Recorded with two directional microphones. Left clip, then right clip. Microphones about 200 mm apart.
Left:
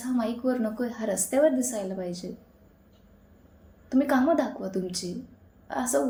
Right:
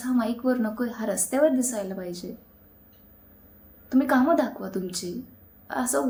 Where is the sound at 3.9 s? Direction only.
15° right (ahead or behind).